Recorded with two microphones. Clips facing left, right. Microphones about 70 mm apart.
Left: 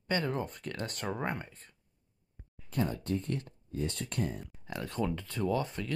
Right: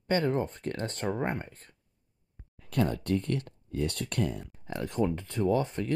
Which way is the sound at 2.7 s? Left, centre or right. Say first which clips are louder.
Right 4 dB; right.